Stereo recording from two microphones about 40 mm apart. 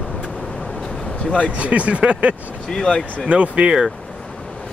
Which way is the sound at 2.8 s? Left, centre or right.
Centre.